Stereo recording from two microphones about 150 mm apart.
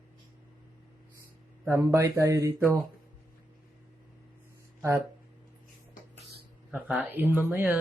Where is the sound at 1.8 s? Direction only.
20° right (ahead or behind).